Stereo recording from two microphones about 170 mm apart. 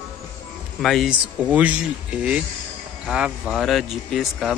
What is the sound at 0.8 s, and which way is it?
Speech, centre (ahead or behind).